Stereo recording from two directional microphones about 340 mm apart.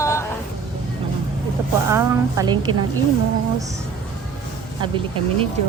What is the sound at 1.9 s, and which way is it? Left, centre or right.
Speech, centre.